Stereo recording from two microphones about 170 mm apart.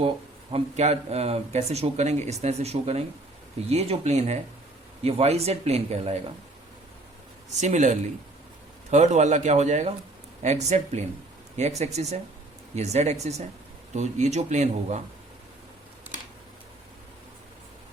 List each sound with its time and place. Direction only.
0.5 s speech: 40° right (ahead or behind)
7.6 s speech: 45° right (ahead or behind)